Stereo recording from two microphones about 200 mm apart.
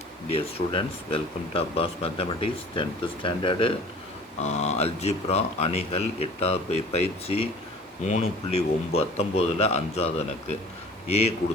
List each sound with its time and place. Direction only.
0.3 s speech: 30° left (ahead or behind)